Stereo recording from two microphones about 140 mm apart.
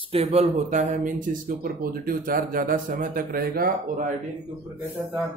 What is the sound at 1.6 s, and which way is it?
Speech, 90° right.